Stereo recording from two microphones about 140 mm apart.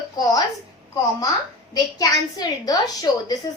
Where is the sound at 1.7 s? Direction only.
25° left (ahead or behind).